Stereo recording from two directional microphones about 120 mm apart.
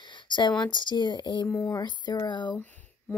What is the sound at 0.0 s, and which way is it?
Speech, 40° left (ahead or behind).